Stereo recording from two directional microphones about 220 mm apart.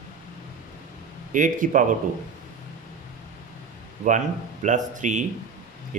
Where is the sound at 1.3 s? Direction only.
35° right (ahead or behind).